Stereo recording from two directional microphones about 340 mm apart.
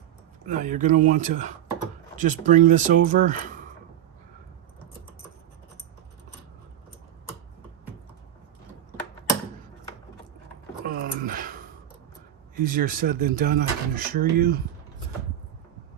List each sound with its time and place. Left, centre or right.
0.4 s speech: right
10.8 s a sound: right
12.5 s speech: right